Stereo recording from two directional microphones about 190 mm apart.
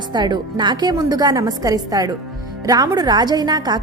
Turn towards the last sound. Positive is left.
turn(degrees=-20)  # may be behind; listen again after turning